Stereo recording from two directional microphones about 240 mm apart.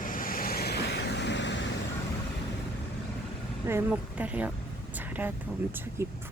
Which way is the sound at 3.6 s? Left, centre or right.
Centre.